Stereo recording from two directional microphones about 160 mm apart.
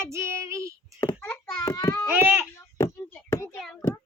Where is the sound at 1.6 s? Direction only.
20° left (ahead or behind).